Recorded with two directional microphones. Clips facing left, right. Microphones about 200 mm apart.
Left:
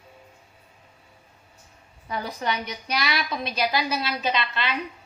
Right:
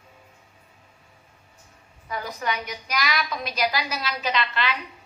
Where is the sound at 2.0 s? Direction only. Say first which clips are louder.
Left 1 dB; 30° left (ahead or behind).